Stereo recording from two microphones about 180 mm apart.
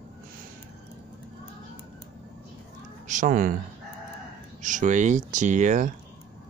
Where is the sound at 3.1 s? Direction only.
45° right (ahead or behind).